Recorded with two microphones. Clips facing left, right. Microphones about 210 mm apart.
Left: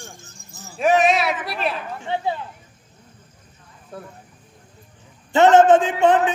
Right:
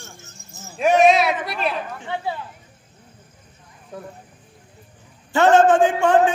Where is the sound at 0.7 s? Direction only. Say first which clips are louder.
Right 2 dB; centre (ahead or behind).